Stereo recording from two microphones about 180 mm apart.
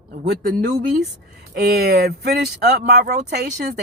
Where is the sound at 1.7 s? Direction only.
60° right (ahead or behind).